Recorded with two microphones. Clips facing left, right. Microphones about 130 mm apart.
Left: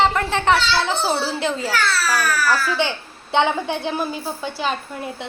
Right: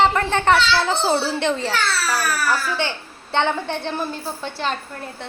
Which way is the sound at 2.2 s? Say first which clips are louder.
Left 2 dB; 30° right (ahead or behind).